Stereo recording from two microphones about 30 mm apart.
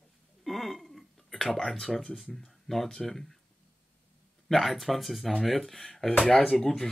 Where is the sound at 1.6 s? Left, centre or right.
Centre.